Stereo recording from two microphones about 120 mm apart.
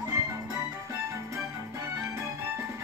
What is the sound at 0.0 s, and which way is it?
Music, 25° right (ahead or behind).